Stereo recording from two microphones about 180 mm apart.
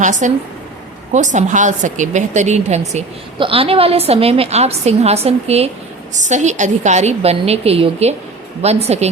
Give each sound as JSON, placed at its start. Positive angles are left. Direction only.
{"t": 0.0, "sound": "a woman's voice", "side_deg": -45}